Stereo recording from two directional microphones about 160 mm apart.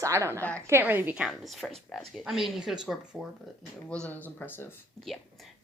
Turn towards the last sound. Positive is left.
turn(degrees=0)  # may be behind; listen again after turning